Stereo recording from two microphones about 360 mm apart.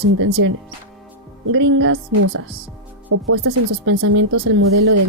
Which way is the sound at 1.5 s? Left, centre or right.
Right.